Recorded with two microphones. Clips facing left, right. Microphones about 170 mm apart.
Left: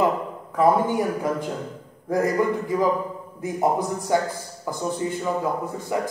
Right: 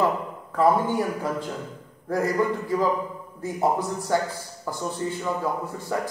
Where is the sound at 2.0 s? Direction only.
15° left (ahead or behind).